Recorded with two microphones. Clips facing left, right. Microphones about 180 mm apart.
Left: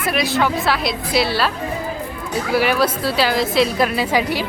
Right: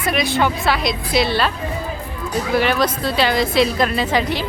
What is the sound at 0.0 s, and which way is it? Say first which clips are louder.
A woman's voice: even; centre (ahead or behind).